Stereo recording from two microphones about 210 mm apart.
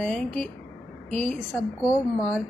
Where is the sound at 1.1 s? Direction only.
30° right (ahead or behind).